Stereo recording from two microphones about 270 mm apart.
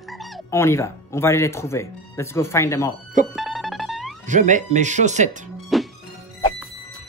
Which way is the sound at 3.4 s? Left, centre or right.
Centre.